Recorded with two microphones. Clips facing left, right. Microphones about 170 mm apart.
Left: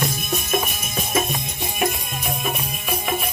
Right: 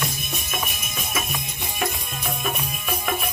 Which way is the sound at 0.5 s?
35° left (ahead or behind).